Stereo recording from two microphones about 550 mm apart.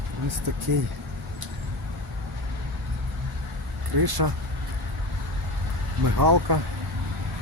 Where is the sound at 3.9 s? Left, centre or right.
Right.